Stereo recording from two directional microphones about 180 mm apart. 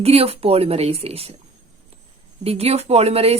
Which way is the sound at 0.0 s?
35° right (ahead or behind).